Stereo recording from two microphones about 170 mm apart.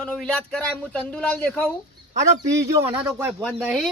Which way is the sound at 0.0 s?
5° left (ahead or behind).